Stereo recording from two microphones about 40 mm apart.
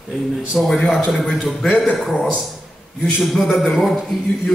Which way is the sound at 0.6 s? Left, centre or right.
Centre.